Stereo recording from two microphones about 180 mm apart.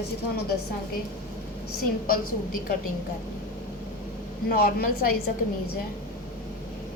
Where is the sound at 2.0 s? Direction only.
50° left (ahead or behind).